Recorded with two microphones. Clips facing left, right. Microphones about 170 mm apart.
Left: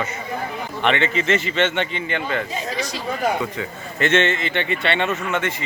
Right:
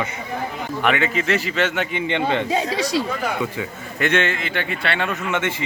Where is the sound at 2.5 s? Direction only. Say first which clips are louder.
Right 6 dB; 70° right (ahead or behind).